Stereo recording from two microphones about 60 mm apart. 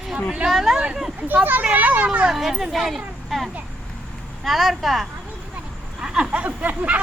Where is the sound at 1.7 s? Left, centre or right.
Right.